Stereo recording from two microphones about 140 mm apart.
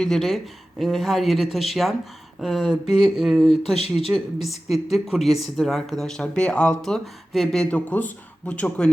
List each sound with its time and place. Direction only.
0.0 s speech: centre (ahead or behind)
3.8 s speech: 50° left (ahead or behind)
4.1 s speech: centre (ahead or behind)